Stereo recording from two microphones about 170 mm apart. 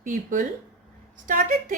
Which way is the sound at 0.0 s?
50° right (ahead or behind).